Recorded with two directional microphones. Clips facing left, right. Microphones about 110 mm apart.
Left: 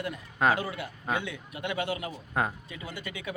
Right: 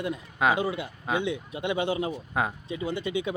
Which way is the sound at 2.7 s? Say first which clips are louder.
Right 10 dB; 25° right (ahead or behind).